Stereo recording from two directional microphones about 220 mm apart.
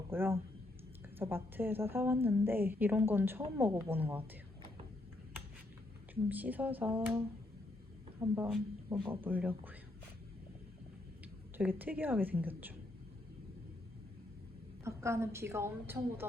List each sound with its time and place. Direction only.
0.1 s a woman's voice: 10° right (ahead or behind)
6.2 s a woman's voice: 5° right (ahead or behind)
8.2 s a woman's voice: 10° right (ahead or behind)
11.5 s a woman's voice: 10° right (ahead or behind)
14.8 s a woman's voice: 10° right (ahead or behind)